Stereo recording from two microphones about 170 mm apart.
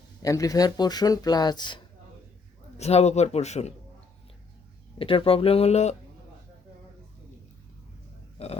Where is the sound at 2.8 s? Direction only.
40° left (ahead or behind).